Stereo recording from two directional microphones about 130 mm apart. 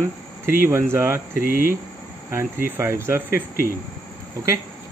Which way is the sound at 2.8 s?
20° right (ahead or behind).